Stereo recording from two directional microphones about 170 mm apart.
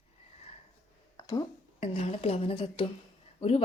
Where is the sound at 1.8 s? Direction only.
35° left (ahead or behind).